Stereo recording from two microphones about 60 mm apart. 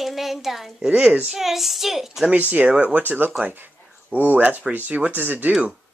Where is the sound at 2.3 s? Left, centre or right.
Right.